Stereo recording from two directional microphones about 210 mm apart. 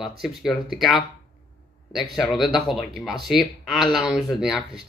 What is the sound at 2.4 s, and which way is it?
Speech, centre (ahead or behind).